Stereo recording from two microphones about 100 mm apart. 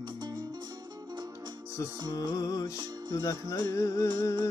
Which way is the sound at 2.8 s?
45° right (ahead or behind).